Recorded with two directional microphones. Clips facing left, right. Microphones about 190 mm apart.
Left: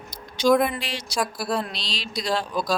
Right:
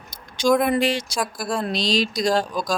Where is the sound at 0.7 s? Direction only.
50° right (ahead or behind).